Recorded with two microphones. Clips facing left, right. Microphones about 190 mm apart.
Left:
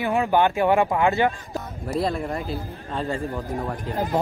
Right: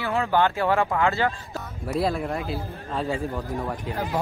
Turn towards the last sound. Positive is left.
turn(degrees=0)  # may be behind; listen again after turning